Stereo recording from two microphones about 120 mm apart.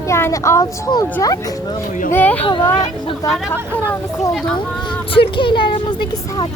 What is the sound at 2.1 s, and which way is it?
Speech, 15° left (ahead or behind).